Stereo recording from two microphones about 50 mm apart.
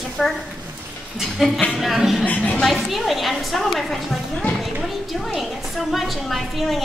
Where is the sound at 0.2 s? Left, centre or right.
Centre.